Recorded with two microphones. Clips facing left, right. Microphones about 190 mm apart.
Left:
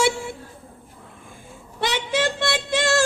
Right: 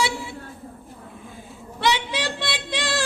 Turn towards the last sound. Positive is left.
turn(degrees=45)  # may be behind; listen again after turning